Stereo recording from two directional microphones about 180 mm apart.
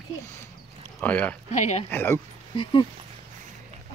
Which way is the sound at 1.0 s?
10° left (ahead or behind).